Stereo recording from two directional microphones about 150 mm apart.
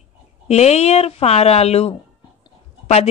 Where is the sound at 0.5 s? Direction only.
45° left (ahead or behind).